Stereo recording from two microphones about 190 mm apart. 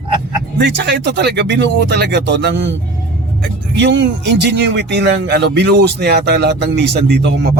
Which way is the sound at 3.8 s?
65° right (ahead or behind).